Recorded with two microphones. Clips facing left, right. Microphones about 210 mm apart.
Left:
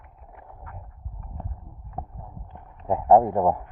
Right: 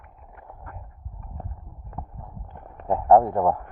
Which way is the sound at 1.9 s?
55° right (ahead or behind).